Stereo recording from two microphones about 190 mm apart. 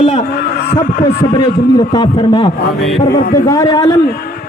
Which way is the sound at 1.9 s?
25° left (ahead or behind).